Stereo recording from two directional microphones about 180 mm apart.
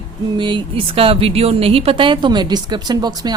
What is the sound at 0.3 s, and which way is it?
Speech, 25° right (ahead or behind).